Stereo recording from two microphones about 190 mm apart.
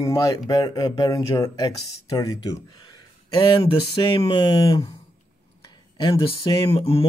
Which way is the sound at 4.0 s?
25° left (ahead or behind).